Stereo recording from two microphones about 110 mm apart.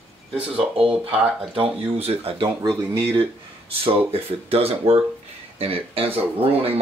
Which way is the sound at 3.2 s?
60° right (ahead or behind).